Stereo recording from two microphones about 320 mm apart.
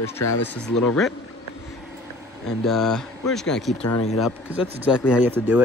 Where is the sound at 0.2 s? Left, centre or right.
Left.